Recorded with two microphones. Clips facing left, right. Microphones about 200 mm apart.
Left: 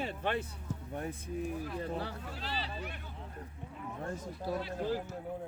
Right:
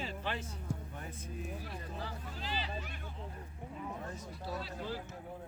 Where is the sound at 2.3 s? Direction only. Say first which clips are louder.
Left 1 dB; 35° left (ahead or behind).